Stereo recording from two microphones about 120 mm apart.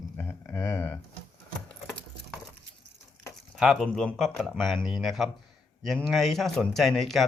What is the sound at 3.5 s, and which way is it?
Speech, centre (ahead or behind).